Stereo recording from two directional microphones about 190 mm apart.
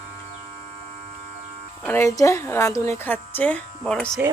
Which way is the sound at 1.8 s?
10° left (ahead or behind).